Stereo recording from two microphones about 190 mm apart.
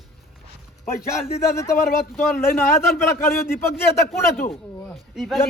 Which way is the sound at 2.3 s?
10° left (ahead or behind).